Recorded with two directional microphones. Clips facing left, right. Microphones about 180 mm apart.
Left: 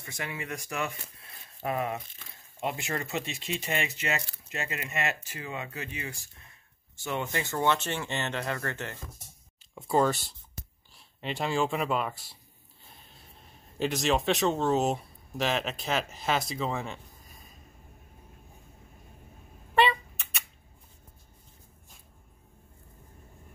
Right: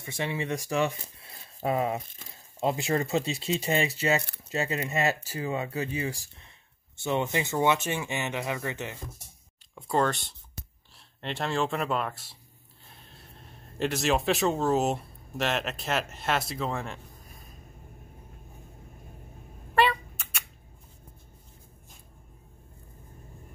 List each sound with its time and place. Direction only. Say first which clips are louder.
0.0 s speech: right 6 dB; 25° right (ahead or behind)
7.0 s speech: right 4 dB; 20° right (ahead or behind)
9.8 s speech: left 1 dB; 5° left (ahead or behind)
19.7 s a sound: even; centre (ahead or behind)